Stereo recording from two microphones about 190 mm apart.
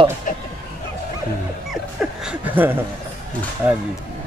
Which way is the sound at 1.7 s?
5° right (ahead or behind).